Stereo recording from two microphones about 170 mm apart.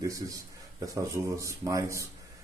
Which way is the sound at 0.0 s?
20° right (ahead or behind).